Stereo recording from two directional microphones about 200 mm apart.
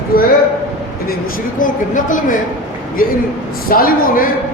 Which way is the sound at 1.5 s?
40° left (ahead or behind).